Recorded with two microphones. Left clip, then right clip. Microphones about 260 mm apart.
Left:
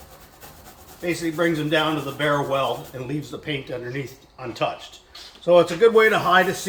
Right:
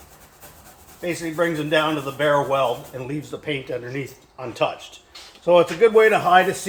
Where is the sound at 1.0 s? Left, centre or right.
Centre.